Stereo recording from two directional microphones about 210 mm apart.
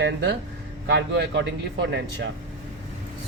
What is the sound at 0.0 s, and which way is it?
Speech, 55° right (ahead or behind).